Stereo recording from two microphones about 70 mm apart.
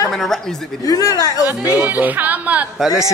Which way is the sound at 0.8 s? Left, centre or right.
Left.